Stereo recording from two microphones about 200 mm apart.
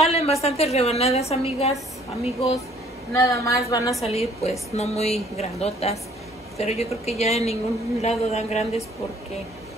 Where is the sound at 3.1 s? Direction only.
15° left (ahead or behind).